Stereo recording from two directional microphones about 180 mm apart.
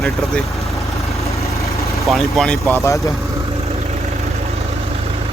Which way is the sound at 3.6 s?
35° right (ahead or behind).